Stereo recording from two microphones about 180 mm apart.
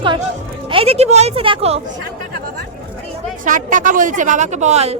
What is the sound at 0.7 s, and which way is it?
Speech, 35° right (ahead or behind).